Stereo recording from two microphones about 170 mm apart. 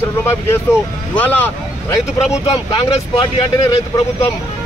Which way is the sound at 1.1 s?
10° left (ahead or behind).